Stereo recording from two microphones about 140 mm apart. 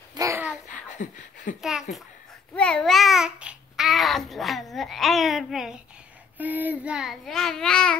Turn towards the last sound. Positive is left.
turn(degrees=5)  # may be behind; listen again after turning